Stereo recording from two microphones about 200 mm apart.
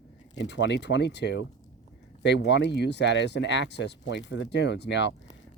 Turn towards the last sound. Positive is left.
turn(degrees=60)  # may be behind; listen again after turning